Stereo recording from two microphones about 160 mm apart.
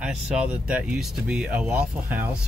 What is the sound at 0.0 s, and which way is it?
Speech, 5° right (ahead or behind).